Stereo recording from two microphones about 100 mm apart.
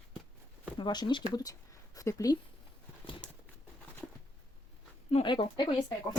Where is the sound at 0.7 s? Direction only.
45° left (ahead or behind).